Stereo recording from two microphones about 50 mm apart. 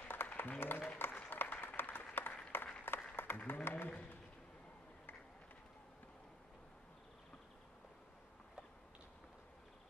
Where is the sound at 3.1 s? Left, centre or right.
Left.